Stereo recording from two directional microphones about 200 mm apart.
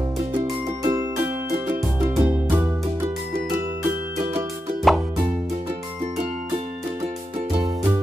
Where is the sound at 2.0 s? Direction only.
15° right (ahead or behind).